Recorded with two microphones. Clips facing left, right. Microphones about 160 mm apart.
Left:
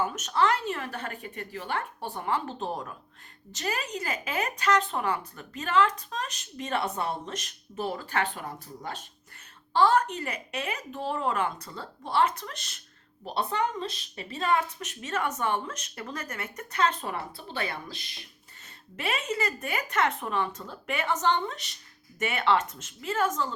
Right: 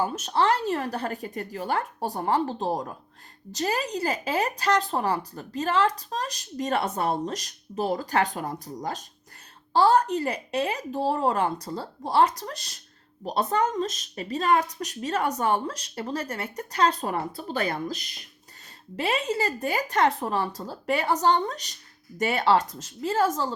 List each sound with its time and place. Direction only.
0.0 s speech: 30° right (ahead or behind)